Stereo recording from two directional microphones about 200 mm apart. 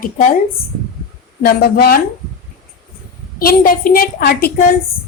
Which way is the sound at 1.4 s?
50° left (ahead or behind).